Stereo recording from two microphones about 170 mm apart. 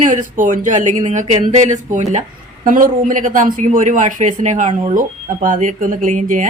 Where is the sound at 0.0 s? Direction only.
50° right (ahead or behind).